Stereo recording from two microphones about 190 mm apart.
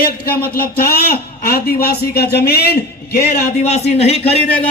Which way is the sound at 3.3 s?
35° left (ahead or behind).